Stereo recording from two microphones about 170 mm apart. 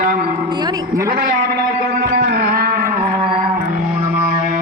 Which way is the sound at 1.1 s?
65° right (ahead or behind).